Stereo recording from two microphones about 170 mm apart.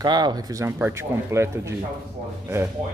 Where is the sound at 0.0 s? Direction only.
25° right (ahead or behind).